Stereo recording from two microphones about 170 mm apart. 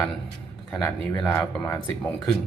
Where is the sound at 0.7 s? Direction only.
5° left (ahead or behind).